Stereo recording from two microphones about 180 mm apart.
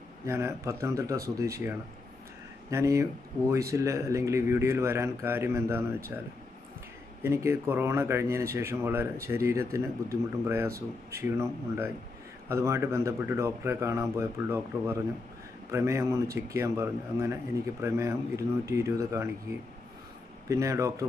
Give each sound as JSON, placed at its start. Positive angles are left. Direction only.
{"t": 0.3, "sound": "speech", "side_deg": -15}
{"t": 7.2, "sound": "speech", "side_deg": -15}
{"t": 20.4, "sound": "speech", "side_deg": -15}